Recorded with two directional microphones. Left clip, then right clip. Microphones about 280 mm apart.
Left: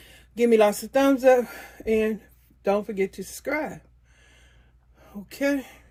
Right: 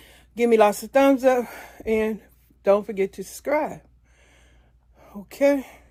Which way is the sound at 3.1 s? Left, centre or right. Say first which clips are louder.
Right 5 dB; centre.